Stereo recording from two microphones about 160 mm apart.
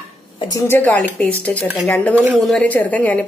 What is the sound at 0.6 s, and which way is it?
Speech, 10° left (ahead or behind).